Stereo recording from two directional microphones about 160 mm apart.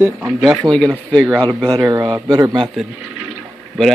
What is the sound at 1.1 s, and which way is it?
Speech, 5° left (ahead or behind).